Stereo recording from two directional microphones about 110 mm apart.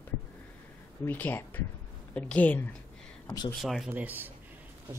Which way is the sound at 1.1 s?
15° left (ahead or behind).